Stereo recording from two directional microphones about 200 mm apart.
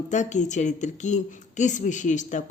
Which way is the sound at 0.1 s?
35° left (ahead or behind).